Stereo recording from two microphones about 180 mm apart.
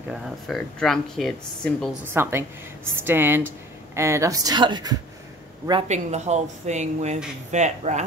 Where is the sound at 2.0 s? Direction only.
15° right (ahead or behind).